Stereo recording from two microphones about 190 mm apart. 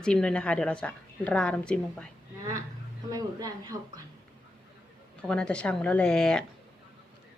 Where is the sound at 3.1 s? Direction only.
20° right (ahead or behind).